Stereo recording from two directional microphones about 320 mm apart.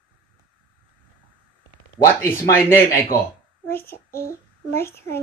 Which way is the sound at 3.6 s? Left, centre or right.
Centre.